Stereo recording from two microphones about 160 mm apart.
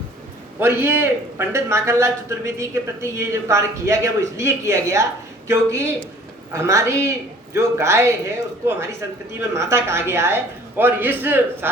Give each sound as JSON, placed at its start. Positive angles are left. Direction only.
{"t": 0.6, "sound": "a man's voice", "side_deg": -15}